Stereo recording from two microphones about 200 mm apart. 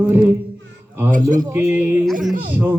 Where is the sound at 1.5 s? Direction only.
10° right (ahead or behind).